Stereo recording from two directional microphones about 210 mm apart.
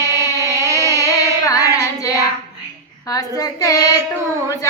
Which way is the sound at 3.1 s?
15° left (ahead or behind).